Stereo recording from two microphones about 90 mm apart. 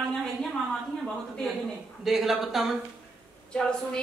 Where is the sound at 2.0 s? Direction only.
5° right (ahead or behind).